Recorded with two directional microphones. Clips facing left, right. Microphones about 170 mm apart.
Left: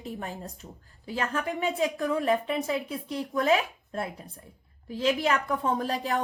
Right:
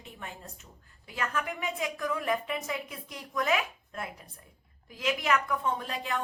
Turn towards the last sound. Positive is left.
turn(degrees=35)  # may be behind; listen again after turning